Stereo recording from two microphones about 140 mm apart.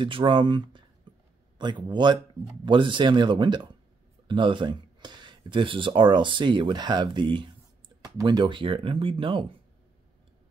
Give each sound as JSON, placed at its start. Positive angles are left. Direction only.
{"t": 0.0, "sound": "speech", "side_deg": -35}
{"t": 1.1, "sound": "a sound", "side_deg": -35}
{"t": 1.6, "sound": "speech", "side_deg": -30}